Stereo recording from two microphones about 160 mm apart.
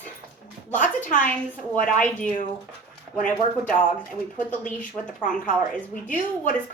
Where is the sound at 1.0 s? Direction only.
55° left (ahead or behind).